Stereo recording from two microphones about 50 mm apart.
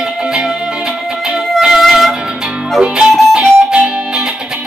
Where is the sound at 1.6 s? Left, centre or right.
Centre.